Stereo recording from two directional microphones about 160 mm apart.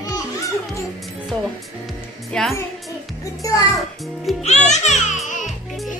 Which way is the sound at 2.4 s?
5° left (ahead or behind).